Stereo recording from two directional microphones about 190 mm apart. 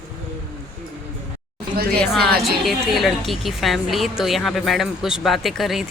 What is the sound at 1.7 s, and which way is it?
Speech, 55° right (ahead or behind).